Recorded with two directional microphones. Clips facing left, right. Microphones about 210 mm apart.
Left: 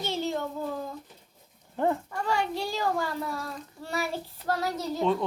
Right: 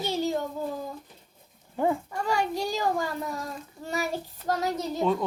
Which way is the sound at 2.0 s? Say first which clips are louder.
Right 1 dB; 10° right (ahead or behind).